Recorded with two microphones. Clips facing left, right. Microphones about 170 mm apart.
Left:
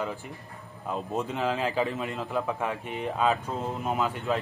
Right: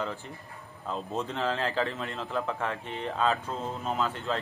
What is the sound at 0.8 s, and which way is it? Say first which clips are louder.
A man's voice: left 2 dB; 15° left (ahead or behind).